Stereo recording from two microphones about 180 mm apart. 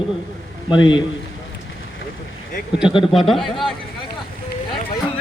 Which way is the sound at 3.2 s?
Centre (ahead or behind).